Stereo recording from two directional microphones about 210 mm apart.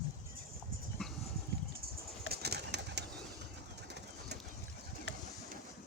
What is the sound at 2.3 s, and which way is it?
Bird, 50° right (ahead or behind).